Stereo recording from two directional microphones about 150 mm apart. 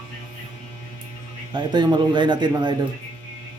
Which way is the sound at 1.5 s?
30° right (ahead or behind).